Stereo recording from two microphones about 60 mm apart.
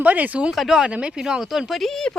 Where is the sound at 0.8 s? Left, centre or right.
Centre.